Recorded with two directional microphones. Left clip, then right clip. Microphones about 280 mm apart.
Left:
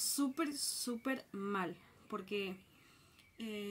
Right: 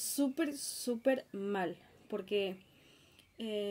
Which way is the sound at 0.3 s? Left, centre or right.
Centre.